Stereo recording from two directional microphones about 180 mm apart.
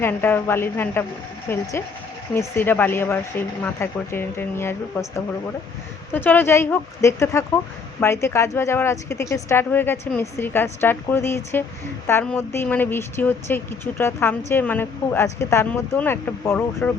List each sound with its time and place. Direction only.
0.0 s a woman's voice: 10° left (ahead or behind)